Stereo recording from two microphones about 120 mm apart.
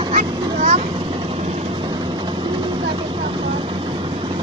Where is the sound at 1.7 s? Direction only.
40° right (ahead or behind).